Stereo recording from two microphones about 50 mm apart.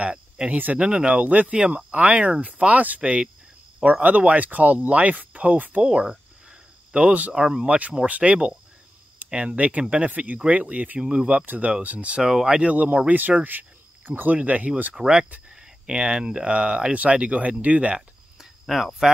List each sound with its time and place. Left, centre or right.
0.0 s speech: right
1.2 s speech: right
5.9 s cricket: centre
7.3 s speech: centre
11.4 s speech: right
12.2 s speech: centre
12.7 s speech: right
13.4 s cricket: right
14.3 s speech: right
15.0 s speech: centre
18.7 s speech: centre